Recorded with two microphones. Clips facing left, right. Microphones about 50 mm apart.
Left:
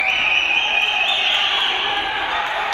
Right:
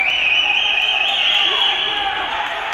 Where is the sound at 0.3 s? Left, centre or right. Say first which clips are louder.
Right 1 dB; right.